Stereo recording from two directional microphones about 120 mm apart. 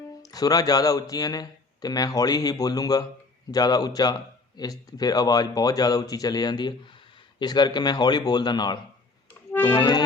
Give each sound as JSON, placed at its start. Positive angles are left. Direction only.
{"t": 0.2, "sound": "speech", "side_deg": 30}